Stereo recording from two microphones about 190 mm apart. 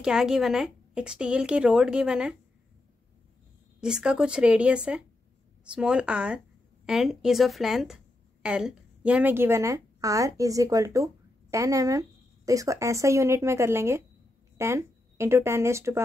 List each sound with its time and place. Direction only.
0.0 s a woman's voice: 5° right (ahead or behind)
3.8 s a woman's voice: 5° right (ahead or behind)